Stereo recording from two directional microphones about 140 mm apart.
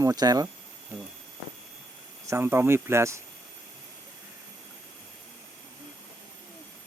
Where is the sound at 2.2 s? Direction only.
20° right (ahead or behind).